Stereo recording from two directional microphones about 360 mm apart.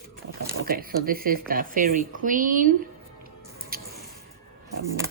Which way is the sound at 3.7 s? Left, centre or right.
Right.